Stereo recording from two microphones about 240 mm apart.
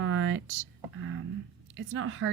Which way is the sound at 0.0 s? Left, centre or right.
Right.